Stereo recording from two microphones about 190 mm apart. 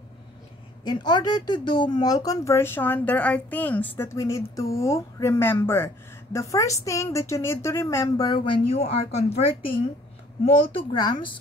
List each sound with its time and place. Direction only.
0.8 s speech: 20° left (ahead or behind)